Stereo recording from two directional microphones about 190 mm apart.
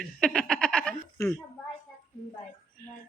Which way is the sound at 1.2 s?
15° left (ahead or behind).